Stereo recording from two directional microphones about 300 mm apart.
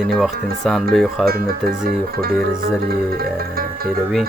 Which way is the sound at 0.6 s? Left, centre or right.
Centre.